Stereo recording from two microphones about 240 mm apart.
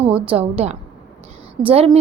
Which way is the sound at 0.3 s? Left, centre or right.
Right.